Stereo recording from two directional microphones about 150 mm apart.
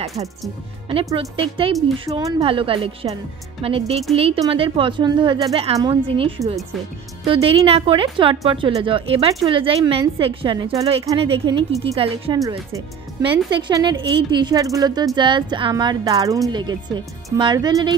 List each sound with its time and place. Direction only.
1.3 s speech: 40° right (ahead or behind)
2.0 s speech: 25° right (ahead or behind)
2.4 s speech: 35° right (ahead or behind)